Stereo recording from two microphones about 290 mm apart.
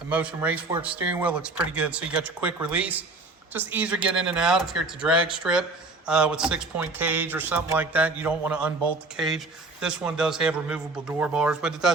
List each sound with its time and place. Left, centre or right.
0.1 s speech: centre